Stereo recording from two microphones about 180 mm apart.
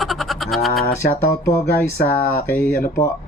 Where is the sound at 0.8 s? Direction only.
55° left (ahead or behind).